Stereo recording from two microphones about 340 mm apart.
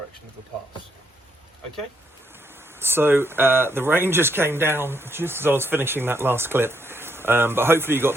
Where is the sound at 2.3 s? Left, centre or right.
Centre.